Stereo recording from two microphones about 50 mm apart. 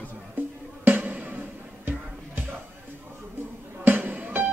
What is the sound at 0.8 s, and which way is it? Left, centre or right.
Music, right.